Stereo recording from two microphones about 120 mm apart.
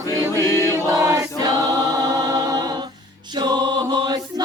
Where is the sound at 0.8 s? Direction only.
25° right (ahead or behind).